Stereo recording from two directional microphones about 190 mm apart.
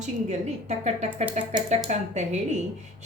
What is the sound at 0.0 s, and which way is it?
Speech, 35° right (ahead or behind).